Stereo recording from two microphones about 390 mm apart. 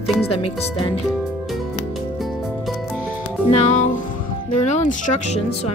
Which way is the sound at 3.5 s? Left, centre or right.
Centre.